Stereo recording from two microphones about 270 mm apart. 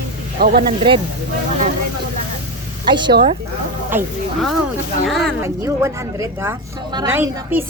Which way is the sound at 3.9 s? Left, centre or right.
Centre.